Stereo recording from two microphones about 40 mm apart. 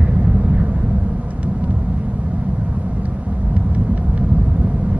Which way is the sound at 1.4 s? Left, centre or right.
Right.